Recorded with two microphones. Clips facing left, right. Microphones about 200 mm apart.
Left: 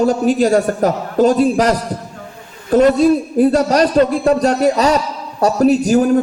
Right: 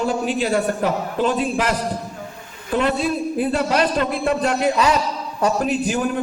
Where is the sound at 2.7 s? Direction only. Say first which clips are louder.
Left 9 dB; 40° left (ahead or behind).